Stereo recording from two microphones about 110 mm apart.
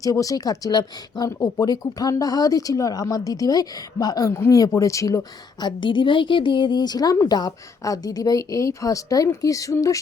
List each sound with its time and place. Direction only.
0.0 s speech: 30° left (ahead or behind)